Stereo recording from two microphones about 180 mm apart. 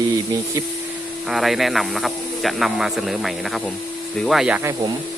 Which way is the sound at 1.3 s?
Centre (ahead or behind).